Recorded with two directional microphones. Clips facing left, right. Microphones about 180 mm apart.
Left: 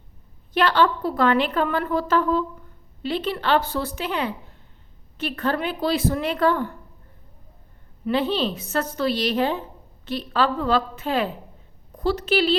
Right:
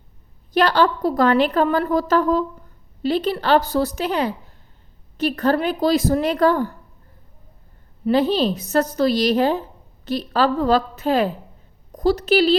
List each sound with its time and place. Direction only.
0.5 s a woman's voice: 40° right (ahead or behind)
8.0 s a woman's voice: 40° right (ahead or behind)